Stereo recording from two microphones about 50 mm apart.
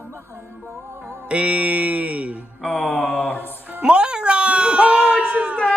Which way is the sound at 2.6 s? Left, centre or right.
Left.